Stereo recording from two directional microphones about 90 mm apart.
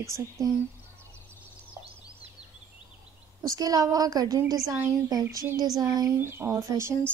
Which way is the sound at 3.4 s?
40° right (ahead or behind).